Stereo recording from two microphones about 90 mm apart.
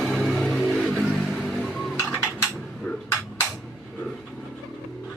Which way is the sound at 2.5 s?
15° left (ahead or behind).